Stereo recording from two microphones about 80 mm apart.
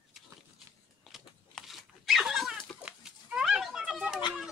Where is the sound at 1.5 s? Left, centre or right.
Centre.